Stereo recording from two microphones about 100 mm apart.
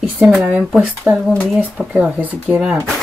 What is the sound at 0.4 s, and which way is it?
Speech, 10° right (ahead or behind).